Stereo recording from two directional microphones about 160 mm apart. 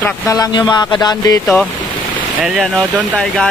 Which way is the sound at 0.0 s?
20° left (ahead or behind).